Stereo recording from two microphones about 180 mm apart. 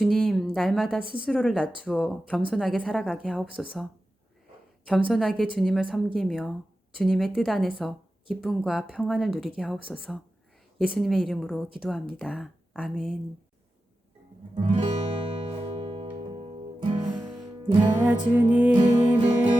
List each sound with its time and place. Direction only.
0.0 s a sound: centre (ahead or behind)
1.2 s speech: centre (ahead or behind)
4.9 s speech: centre (ahead or behind)
14.5 s music: 30° right (ahead or behind)
17.9 s music: 10° right (ahead or behind)
18.7 s music: 25° right (ahead or behind)